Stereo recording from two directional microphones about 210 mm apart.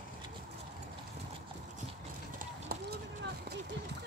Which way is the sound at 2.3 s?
45° right (ahead or behind).